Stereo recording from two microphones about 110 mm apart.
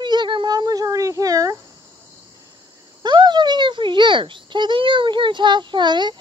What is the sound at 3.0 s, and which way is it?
A child's voice, 45° right (ahead or behind).